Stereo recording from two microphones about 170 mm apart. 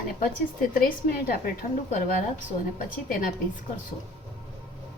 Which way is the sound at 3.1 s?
55° left (ahead or behind).